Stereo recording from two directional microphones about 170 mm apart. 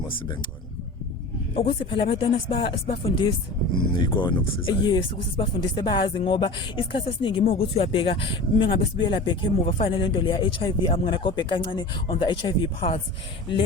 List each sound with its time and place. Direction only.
1.5 s speech: 30° left (ahead or behind)